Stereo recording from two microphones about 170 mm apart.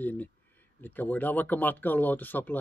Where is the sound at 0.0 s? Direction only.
10° left (ahead or behind).